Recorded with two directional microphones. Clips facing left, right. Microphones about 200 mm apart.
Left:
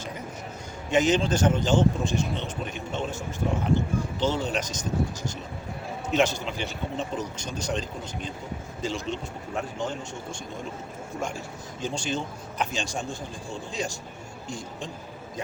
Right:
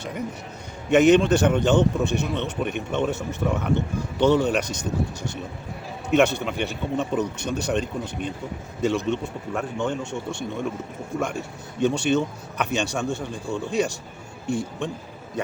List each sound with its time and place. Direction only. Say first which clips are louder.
0.9 s a man's voice: right 7 dB; 65° right (ahead or behind)
6.1 s a man's voice: right 5 dB; 60° right (ahead or behind)